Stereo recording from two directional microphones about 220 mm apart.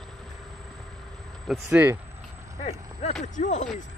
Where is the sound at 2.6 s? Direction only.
30° left (ahead or behind).